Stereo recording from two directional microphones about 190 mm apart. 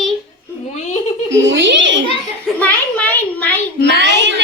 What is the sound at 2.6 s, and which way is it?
Speech, 10° left (ahead or behind).